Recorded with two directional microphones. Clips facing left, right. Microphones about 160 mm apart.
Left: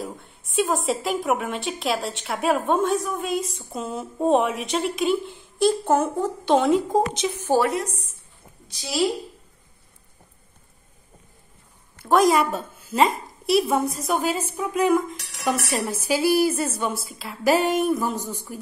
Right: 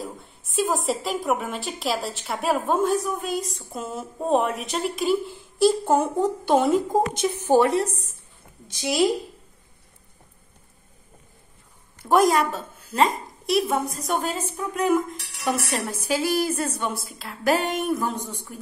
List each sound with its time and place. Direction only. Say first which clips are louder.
0.0 s a woman's voice: left 1 dB; centre (ahead or behind); by 7.7 s 15° right (ahead or behind)
7.7 s a woman's voice: right 4 dB; 35° right (ahead or behind)
12.0 s a woman's voice: left 1 dB; 5° right (ahead or behind)
12.4 s a woman's voice: left 1 dB; 10° left (ahead or behind)